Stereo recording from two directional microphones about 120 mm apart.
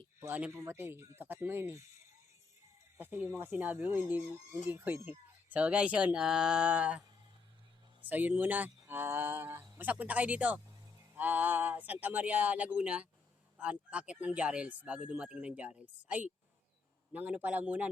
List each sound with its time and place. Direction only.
0.2 s speech: 15° right (ahead or behind)
3.0 s speech: 15° right (ahead or behind)
8.0 s speech: 15° right (ahead or behind)